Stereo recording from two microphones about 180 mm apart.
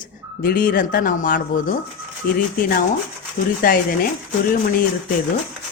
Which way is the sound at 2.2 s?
60° left (ahead or behind).